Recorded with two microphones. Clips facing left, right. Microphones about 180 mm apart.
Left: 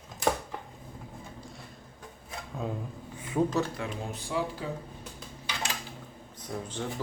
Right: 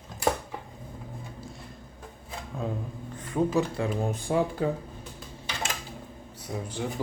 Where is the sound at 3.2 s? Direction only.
5° left (ahead or behind).